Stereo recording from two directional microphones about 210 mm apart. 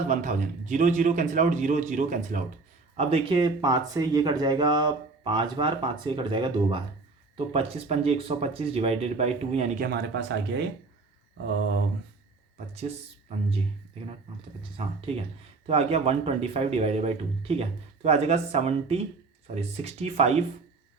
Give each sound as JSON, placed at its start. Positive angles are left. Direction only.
{"t": 0.1, "sound": "speech", "side_deg": -35}
{"t": 9.8, "sound": "speech", "side_deg": -50}
{"t": 14.6, "sound": "speech", "side_deg": -30}